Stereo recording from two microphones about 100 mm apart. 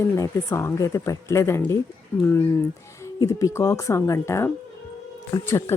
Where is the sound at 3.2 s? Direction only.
35° left (ahead or behind).